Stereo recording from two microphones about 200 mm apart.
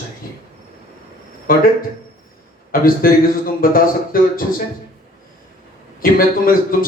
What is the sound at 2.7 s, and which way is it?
A man's voice, 45° left (ahead or behind).